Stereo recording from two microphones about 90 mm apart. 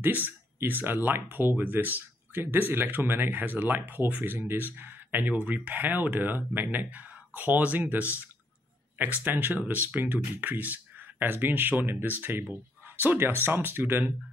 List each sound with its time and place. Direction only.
0.0 s speech: 20° right (ahead or behind)